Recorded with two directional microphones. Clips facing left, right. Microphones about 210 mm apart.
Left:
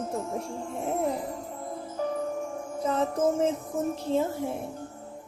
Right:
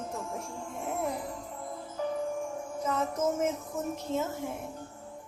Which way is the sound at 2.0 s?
40° left (ahead or behind).